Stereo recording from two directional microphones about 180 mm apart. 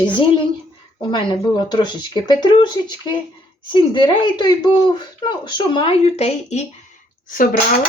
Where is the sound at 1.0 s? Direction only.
25° left (ahead or behind).